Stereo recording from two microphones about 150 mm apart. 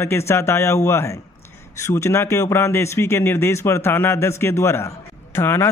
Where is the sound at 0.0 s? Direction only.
15° left (ahead or behind).